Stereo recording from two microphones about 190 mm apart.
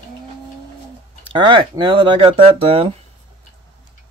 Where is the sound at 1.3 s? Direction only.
25° right (ahead or behind).